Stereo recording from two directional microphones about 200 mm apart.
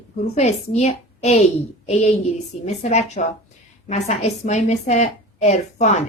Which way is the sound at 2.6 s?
35° left (ahead or behind).